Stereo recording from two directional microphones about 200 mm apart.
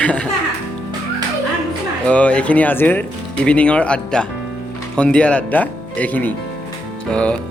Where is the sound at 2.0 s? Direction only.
5° left (ahead or behind).